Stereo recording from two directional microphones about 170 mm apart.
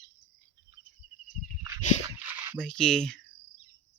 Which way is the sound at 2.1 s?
10° right (ahead or behind).